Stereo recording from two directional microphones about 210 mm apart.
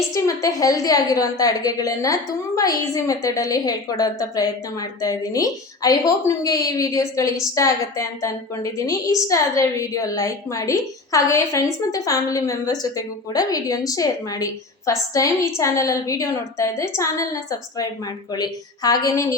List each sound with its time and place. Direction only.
0.1 s a woman's voice: 15° left (ahead or behind)
18.3 s a woman's voice: 20° left (ahead or behind)